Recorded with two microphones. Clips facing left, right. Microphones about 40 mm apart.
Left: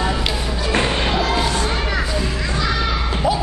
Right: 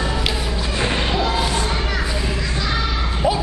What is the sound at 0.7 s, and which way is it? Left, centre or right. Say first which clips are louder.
Music: left 3 dB; left.